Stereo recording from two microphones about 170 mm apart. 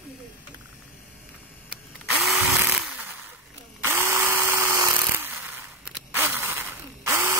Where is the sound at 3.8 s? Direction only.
15° right (ahead or behind).